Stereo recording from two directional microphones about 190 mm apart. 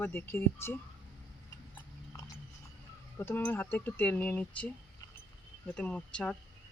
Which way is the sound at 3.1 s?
10° left (ahead or behind).